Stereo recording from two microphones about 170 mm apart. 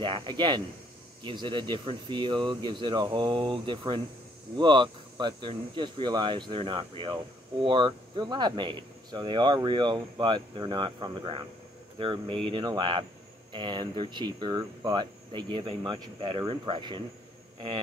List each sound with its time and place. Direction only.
0.0 s speech: 30° right (ahead or behind)